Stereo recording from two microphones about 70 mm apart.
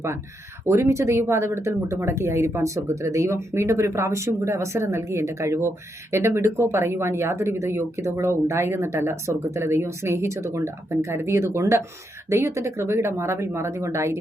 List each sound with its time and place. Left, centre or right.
0.7 s speech: right